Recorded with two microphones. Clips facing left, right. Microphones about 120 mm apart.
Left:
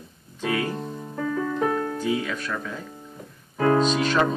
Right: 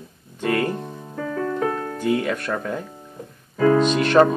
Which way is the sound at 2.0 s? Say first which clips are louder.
Right 4 dB; 60° right (ahead or behind).